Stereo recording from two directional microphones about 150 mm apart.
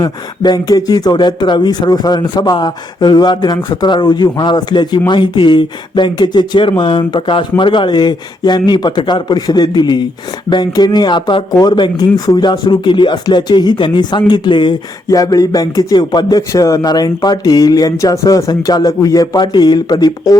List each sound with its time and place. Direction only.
0.0 s speech: 25° left (ahead or behind)